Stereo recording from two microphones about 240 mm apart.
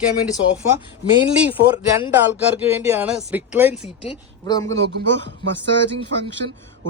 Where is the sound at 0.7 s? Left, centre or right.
Centre.